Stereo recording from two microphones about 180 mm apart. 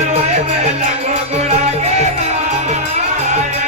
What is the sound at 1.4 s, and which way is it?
Music, 40° right (ahead or behind).